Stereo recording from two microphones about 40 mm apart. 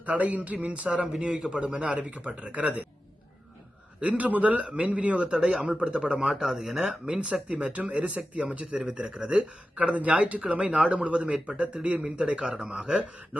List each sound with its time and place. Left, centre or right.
0.0 s speech: right
0.9 s a man's voice: centre
1.2 s speech: right
4.0 s speech: right
6.3 s speech: centre; by 8.8 s right
9.0 s speech: right
10.0 s speech: right